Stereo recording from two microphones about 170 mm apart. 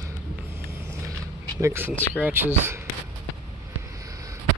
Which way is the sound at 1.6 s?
15° right (ahead or behind).